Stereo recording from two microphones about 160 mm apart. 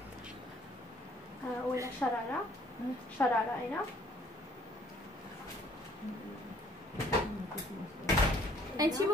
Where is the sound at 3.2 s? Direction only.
15° left (ahead or behind).